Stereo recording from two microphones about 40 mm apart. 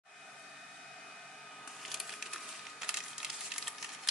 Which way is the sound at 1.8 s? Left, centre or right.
Centre.